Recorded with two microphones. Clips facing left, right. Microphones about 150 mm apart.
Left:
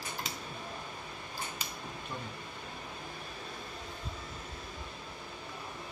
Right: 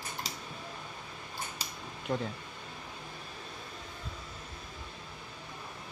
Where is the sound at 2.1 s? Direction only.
45° right (ahead or behind).